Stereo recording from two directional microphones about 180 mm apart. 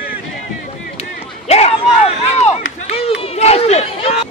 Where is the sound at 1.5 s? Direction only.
35° left (ahead or behind).